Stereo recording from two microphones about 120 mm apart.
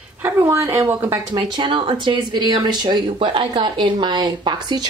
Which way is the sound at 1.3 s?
40° right (ahead or behind).